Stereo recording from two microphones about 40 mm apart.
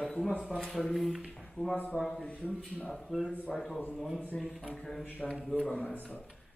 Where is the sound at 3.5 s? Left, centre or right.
Centre.